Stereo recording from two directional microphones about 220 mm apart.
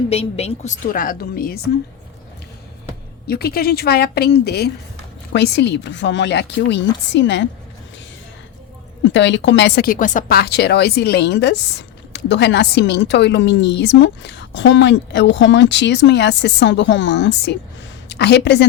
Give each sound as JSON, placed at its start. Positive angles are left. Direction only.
{"t": 0.1, "sound": "a woman's voice", "side_deg": 30}
{"t": 3.2, "sound": "a woman's voice", "side_deg": 45}
{"t": 9.0, "sound": "speech", "side_deg": 55}